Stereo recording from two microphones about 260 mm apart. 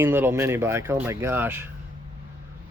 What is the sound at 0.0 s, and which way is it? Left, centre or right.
Speech, centre.